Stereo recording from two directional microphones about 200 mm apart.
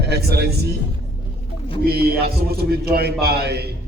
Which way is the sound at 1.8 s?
50° right (ahead or behind).